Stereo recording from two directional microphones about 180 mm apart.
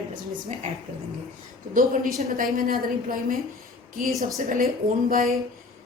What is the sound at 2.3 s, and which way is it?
A woman's voice, 50° right (ahead or behind).